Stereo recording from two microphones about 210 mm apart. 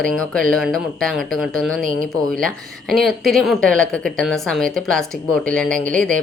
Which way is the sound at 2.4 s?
Centre (ahead or behind).